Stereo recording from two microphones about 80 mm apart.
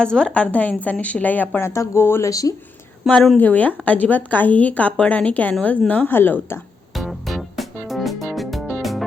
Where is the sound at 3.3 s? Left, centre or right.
Centre.